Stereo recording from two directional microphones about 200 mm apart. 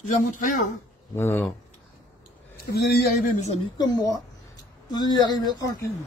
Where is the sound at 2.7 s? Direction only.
45° left (ahead or behind).